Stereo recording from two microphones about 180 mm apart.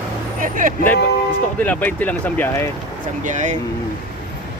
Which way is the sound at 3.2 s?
45° right (ahead or behind).